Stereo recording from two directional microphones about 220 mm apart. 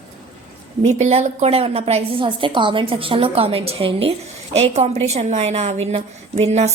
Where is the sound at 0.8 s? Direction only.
30° right (ahead or behind).